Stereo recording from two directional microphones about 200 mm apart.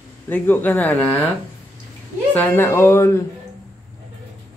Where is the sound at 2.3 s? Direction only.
10° left (ahead or behind).